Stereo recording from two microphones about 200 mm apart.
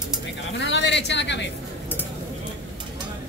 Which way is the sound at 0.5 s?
60° left (ahead or behind).